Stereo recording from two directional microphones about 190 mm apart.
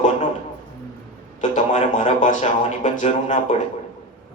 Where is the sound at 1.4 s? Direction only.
40° left (ahead or behind).